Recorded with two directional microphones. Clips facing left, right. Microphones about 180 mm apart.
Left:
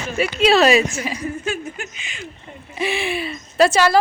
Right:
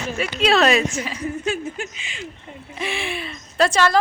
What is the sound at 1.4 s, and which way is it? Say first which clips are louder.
Speech: right 1 dB; 25° right (ahead or behind).